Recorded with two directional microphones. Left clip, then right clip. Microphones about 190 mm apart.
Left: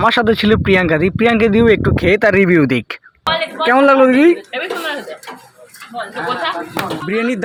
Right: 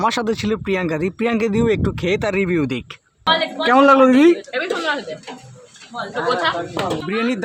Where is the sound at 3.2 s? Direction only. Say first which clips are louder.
Left 2 dB; centre (ahead or behind).